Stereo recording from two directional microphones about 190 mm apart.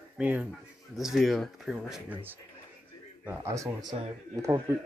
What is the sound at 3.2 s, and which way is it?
Speech, 15° right (ahead or behind).